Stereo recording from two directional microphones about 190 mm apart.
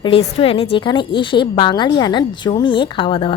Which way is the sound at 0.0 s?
30° left (ahead or behind).